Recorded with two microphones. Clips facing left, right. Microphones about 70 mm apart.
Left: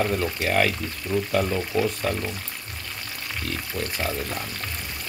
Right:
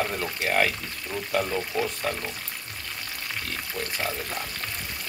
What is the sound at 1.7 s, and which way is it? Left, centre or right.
Speech, right.